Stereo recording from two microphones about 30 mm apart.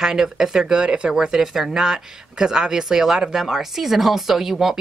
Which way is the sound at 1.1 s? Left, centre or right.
Right.